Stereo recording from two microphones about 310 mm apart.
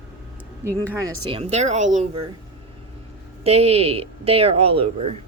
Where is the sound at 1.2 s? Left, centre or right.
Centre.